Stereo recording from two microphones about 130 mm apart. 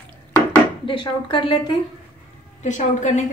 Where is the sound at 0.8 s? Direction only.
40° left (ahead or behind).